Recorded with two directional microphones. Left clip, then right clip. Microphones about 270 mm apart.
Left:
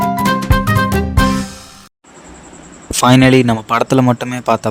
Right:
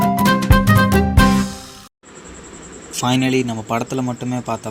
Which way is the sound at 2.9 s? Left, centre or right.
Left.